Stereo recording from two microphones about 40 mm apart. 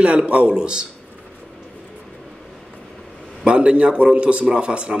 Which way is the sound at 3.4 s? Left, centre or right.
Right.